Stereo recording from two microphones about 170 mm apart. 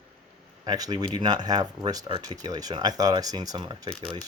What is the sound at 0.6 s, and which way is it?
Speech, 25° right (ahead or behind).